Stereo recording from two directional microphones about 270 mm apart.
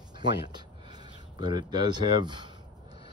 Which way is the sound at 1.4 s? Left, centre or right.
Centre.